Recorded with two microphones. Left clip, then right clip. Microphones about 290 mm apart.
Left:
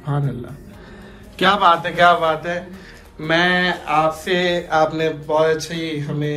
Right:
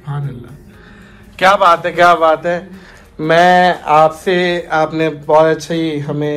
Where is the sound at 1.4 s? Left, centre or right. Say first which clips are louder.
Right 5 dB; centre.